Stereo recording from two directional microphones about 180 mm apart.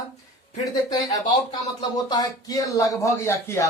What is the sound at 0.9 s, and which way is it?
A man's voice, 25° left (ahead or behind).